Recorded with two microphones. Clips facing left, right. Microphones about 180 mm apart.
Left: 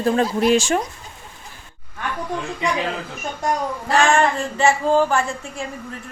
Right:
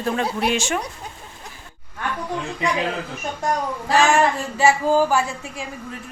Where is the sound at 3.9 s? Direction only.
5° right (ahead or behind).